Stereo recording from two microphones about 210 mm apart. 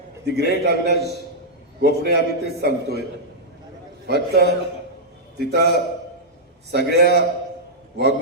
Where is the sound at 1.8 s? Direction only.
50° right (ahead or behind).